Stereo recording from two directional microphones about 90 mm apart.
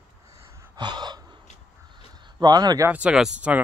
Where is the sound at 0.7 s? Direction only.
55° right (ahead or behind).